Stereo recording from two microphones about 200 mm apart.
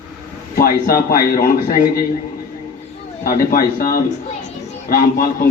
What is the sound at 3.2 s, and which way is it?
Speech, 45° left (ahead or behind).